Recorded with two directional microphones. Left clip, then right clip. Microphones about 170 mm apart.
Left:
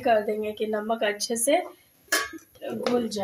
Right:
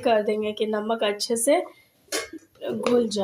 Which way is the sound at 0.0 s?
20° right (ahead or behind).